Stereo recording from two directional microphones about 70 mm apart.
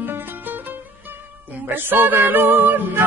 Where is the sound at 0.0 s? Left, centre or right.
Right.